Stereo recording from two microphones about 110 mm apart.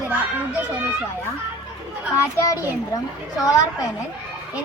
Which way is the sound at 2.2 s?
30° left (ahead or behind).